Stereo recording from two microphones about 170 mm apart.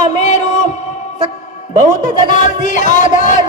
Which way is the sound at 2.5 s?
50° left (ahead or behind).